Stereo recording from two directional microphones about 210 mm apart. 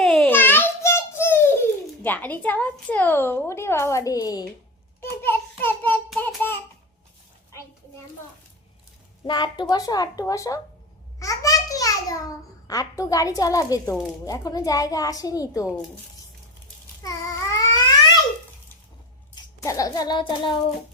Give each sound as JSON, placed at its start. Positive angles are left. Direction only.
{"t": 0.0, "sound": "a sound", "side_deg": 5}
{"t": 2.0, "sound": "a woman's voice", "side_deg": 10}
{"t": 9.2, "sound": "a woman's voice", "side_deg": 20}
{"t": 11.2, "sound": "a sound", "side_deg": 15}
{"t": 12.6, "sound": "a woman's voice", "side_deg": 15}
{"t": 17.0, "sound": "babbling", "side_deg": 15}
{"t": 19.4, "sound": "a child's voice", "side_deg": 15}